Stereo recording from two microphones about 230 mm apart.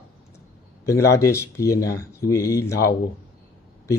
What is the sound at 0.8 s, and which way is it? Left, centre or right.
A man's voice, centre.